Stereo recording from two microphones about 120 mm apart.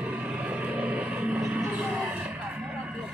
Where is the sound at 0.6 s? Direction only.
10° right (ahead or behind).